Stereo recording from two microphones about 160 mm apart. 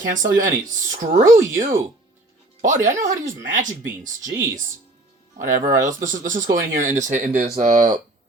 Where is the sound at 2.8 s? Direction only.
55° right (ahead or behind).